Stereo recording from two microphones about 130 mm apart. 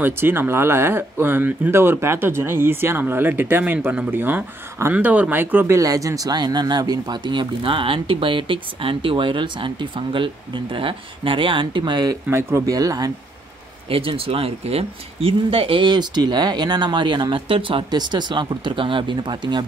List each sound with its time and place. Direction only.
0.0 s speech: 15° right (ahead or behind)
5.8 s speech: 25° right (ahead or behind)
12.3 s speech: 20° right (ahead or behind)
13.8 s speech: 45° right (ahead or behind)